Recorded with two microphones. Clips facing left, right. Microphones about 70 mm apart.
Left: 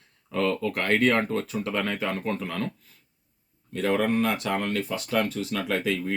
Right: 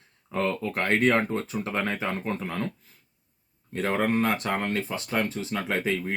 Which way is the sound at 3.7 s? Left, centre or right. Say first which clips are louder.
Left 1 dB; right.